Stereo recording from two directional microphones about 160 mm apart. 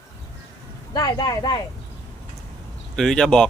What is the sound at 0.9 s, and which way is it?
Speech, 25° left (ahead or behind).